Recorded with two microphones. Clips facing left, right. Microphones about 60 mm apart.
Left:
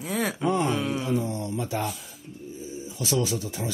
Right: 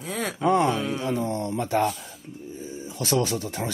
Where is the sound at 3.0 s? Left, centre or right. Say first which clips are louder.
Right 2 dB; right.